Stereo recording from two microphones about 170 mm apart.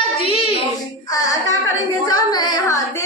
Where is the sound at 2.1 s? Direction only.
25° left (ahead or behind).